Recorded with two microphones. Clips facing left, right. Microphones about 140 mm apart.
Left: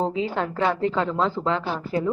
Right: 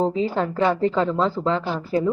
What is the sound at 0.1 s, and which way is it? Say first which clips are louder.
Speech: right 3 dB; 40° right (ahead or behind).